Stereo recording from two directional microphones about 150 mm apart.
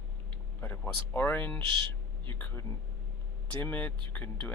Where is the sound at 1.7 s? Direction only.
35° right (ahead or behind).